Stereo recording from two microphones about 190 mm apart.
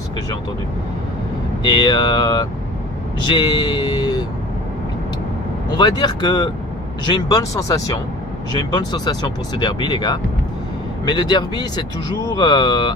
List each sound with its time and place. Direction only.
1.7 s speech: 20° left (ahead or behind)
5.8 s speech: 20° left (ahead or behind)